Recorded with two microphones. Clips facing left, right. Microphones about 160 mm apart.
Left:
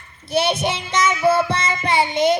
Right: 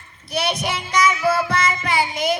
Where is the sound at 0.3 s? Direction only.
30° left (ahead or behind).